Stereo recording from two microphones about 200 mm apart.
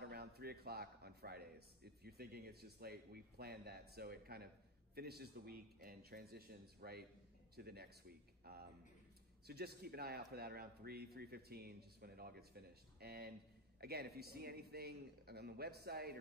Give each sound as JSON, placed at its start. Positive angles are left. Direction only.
{"t": 0.0, "sound": "a man's voice", "side_deg": -50}
{"t": 9.5, "sound": "a man's voice", "side_deg": -50}